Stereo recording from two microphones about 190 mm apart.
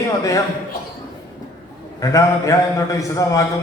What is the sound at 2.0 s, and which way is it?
A man's voice, 15° left (ahead or behind).